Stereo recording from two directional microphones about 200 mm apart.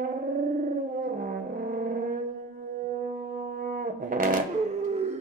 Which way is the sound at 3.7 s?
45° right (ahead or behind).